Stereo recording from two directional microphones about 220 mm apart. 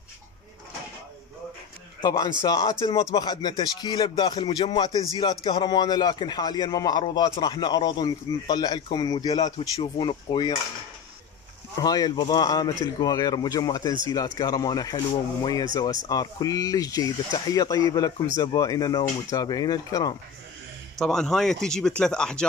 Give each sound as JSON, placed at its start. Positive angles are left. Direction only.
{"t": 2.0, "sound": "a man's voice", "side_deg": 20}
{"t": 11.8, "sound": "a man's voice", "side_deg": 15}
{"t": 21.0, "sound": "speech", "side_deg": 0}